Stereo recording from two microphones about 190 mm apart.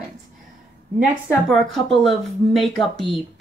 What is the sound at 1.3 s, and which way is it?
Speech, centre (ahead or behind).